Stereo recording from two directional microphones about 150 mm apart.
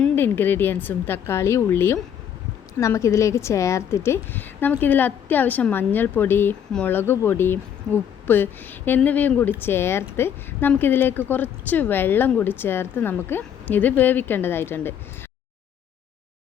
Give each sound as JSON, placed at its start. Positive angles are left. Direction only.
{"t": 0.0, "sound": "a woman's voice", "side_deg": 15}